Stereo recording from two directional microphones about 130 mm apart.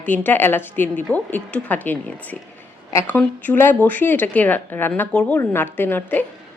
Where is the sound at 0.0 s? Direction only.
15° left (ahead or behind).